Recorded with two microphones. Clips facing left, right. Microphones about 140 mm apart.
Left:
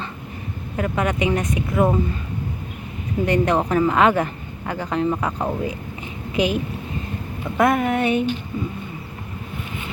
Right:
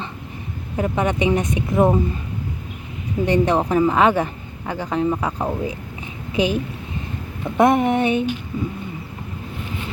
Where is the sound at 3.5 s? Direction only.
15° right (ahead or behind).